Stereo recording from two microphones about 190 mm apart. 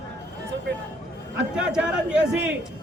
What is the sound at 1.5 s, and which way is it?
Speech, 5° right (ahead or behind).